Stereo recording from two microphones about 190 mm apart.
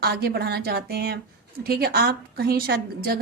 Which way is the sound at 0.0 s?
55° right (ahead or behind).